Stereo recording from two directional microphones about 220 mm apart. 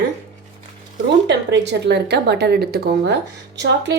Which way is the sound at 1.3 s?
50° right (ahead or behind).